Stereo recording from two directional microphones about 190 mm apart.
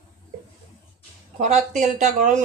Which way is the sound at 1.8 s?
40° right (ahead or behind).